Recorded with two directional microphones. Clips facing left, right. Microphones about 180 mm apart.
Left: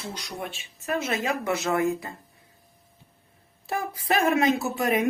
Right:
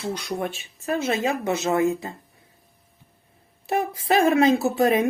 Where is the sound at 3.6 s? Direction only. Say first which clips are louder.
Right 5 dB; 20° right (ahead or behind).